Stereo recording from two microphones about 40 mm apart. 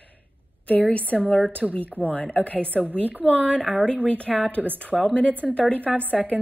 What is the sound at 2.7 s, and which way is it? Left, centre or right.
Speech, right.